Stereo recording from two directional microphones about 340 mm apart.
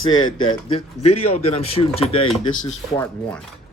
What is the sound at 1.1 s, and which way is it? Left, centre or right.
Speech, centre.